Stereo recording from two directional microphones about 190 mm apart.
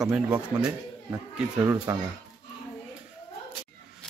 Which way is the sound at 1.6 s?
15° right (ahead or behind).